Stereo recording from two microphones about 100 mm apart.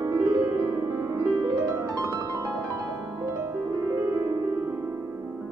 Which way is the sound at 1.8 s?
40° right (ahead or behind).